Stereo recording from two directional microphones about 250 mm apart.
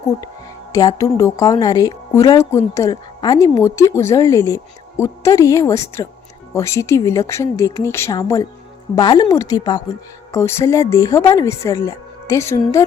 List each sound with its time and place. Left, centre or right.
0.7 s a woman's voice: centre